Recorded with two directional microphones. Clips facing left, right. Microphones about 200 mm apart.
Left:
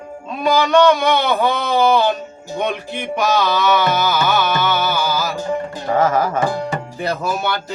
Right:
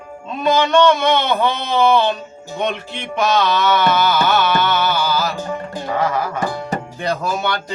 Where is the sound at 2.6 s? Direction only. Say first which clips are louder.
Even; 10° left (ahead or behind).